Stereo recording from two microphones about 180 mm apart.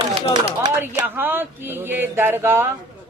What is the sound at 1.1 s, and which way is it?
Speech, 10° right (ahead or behind).